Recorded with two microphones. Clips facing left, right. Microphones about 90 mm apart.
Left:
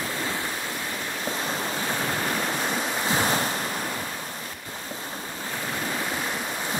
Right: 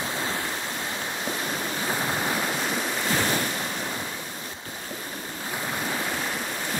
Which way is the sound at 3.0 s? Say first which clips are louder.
Left 1 dB; 20° left (ahead or behind).